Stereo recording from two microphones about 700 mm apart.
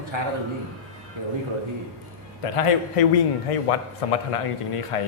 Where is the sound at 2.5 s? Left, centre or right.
Left.